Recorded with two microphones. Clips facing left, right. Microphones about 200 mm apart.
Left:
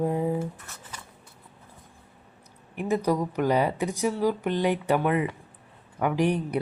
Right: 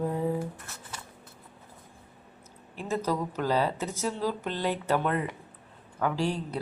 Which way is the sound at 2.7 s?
15° left (ahead or behind).